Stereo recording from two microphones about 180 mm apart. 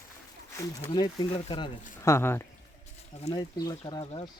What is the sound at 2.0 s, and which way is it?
Speech, 15° left (ahead or behind).